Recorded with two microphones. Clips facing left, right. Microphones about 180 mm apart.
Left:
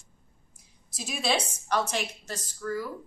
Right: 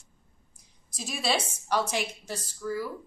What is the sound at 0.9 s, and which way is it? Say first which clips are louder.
A woman's voice: left 1 dB; centre (ahead or behind).